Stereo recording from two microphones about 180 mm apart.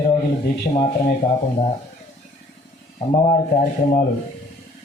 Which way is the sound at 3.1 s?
40° left (ahead or behind).